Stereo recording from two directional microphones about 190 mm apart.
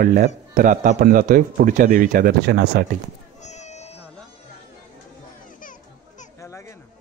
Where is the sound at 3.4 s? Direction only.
35° left (ahead or behind).